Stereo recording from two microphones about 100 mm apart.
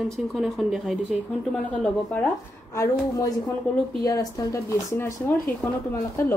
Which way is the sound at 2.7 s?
30° left (ahead or behind).